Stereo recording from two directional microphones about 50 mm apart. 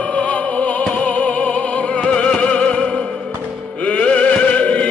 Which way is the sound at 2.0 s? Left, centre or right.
Centre.